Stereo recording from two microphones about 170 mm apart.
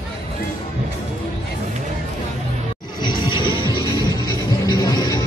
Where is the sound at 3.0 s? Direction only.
25° left (ahead or behind).